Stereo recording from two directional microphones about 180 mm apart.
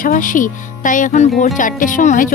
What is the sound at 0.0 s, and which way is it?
Speech, 45° left (ahead or behind).